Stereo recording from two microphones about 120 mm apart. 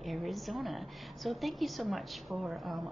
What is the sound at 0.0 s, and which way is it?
A woman's voice, centre (ahead or behind).